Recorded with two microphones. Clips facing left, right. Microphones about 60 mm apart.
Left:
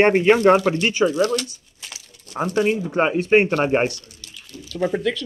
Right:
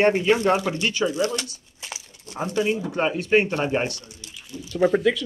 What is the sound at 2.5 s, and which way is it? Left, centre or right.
Speech, left.